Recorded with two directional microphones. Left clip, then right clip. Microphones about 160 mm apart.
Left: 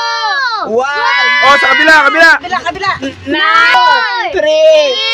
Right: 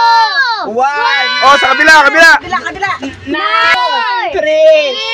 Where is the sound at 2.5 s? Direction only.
35° left (ahead or behind).